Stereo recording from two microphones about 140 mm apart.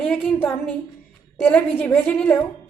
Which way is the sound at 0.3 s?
10° left (ahead or behind).